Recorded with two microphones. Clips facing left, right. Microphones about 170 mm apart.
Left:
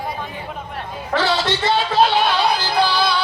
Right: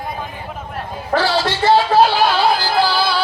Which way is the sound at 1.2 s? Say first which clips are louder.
Right 3 dB; 20° left (ahead or behind).